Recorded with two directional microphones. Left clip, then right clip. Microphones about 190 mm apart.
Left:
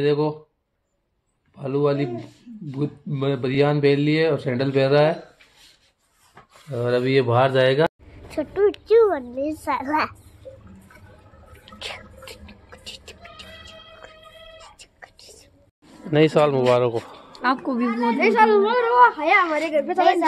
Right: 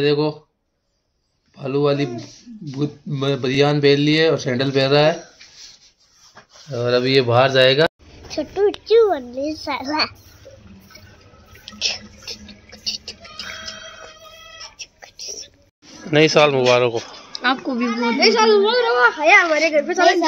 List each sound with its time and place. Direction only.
0.0 s speech: centre (ahead or behind)
1.6 s speech: centre (ahead or behind)
6.7 s speech: centre (ahead or behind)
8.4 s a child's voice: 10° left (ahead or behind)
11.6 s a sound: 15° left (ahead or behind)
12.7 s music: 15° left (ahead or behind)
14.8 s whispering: 15° left (ahead or behind)
16.1 s a child's voice: 10° left (ahead or behind); by 18.9 s 30° left (ahead or behind)
18.9 s a woman's voice: 60° left (ahead or behind)
20.0 s speech: centre (ahead or behind)